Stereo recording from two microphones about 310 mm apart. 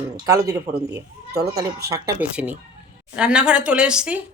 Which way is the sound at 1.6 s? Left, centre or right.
Right.